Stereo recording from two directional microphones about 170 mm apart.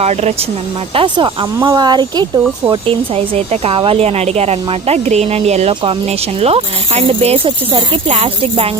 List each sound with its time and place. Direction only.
0.0 s speech: 40° right (ahead or behind)
0.9 s speech: 30° right (ahead or behind)